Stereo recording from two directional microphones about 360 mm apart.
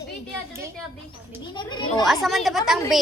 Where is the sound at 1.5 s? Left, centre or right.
Centre.